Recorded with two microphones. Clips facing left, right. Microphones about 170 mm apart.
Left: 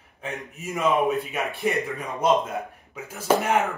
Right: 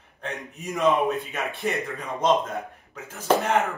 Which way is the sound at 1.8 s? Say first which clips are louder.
Left 1 dB; 15° left (ahead or behind).